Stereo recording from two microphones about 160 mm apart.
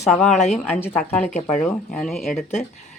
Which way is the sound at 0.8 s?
10° left (ahead or behind).